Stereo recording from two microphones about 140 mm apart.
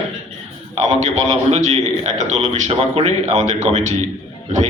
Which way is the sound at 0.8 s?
55° right (ahead or behind).